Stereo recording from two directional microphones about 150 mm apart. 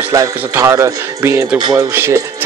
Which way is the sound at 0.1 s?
20° right (ahead or behind).